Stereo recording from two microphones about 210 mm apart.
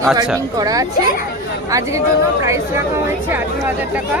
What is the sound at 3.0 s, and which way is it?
Speech, 10° right (ahead or behind).